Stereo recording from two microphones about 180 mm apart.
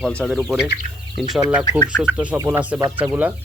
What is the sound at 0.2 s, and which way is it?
Speech, centre (ahead or behind).